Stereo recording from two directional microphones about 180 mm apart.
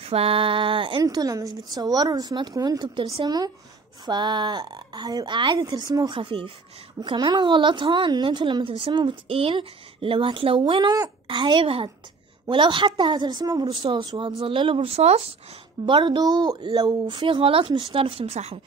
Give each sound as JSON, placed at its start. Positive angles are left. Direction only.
{"t": 0.0, "sound": "a woman's voice", "side_deg": -30}